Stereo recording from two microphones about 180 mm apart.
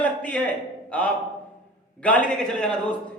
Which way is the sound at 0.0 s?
10° left (ahead or behind).